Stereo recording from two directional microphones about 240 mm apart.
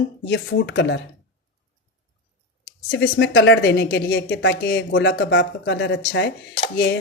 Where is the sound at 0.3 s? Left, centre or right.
Left.